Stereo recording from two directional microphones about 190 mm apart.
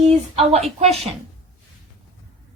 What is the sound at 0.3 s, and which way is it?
Speech, 35° right (ahead or behind).